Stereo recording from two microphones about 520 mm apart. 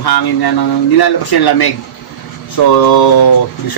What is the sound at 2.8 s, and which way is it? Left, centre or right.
Speech, left.